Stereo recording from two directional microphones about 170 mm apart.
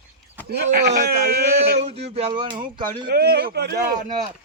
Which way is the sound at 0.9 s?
70° right (ahead or behind).